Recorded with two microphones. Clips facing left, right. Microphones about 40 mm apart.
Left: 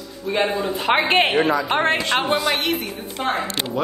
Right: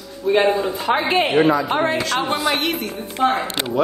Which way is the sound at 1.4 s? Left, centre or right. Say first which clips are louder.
Right 3 dB; right.